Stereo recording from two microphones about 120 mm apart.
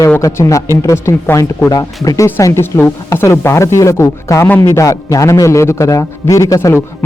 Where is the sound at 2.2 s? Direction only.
20° left (ahead or behind).